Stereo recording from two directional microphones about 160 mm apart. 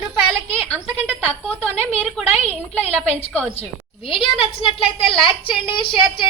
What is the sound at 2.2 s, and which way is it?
Speech, 40° left (ahead or behind).